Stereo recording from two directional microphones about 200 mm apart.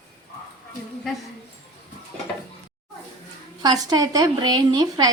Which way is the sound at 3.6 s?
20° right (ahead or behind).